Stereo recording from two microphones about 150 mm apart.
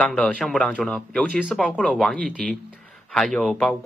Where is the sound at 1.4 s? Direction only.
5° right (ahead or behind).